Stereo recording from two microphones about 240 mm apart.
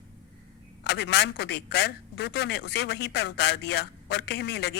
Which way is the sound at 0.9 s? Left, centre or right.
Left.